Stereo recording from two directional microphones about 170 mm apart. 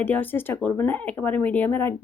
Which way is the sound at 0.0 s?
10° left (ahead or behind).